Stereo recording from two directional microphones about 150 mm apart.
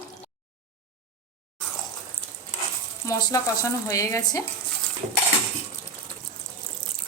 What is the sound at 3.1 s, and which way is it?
Speech, 20° left (ahead or behind).